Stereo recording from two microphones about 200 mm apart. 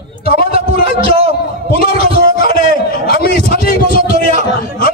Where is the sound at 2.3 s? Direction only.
45° left (ahead or behind).